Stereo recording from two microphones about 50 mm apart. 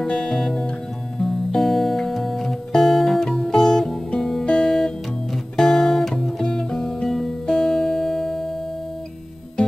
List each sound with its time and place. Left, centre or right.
0.0 s music: left
0.3 s music: centre